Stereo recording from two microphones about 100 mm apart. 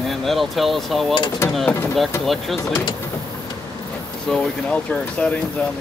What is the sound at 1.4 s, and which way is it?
Speech, 25° left (ahead or behind).